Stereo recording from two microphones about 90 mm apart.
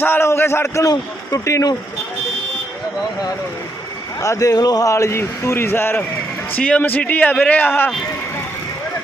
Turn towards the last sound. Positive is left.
turn(degrees=20)  # may be behind; listen again after turning